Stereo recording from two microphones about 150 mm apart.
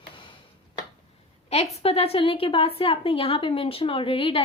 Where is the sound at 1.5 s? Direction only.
45° left (ahead or behind).